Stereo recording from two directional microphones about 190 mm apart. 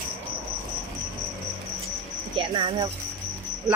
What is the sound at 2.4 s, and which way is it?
Speech, 25° right (ahead or behind).